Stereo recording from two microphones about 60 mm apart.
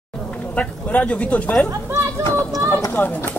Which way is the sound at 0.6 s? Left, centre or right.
Left.